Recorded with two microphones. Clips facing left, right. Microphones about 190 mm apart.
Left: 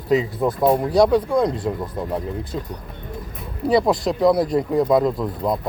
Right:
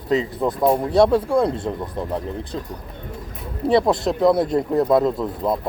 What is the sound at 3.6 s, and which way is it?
Speech, centre (ahead or behind).